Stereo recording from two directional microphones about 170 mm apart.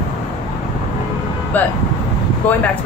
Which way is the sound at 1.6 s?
10° left (ahead or behind).